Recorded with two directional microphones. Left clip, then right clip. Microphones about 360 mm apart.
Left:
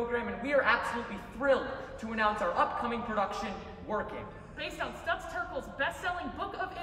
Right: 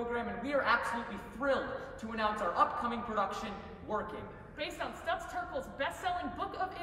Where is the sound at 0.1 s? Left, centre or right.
Centre.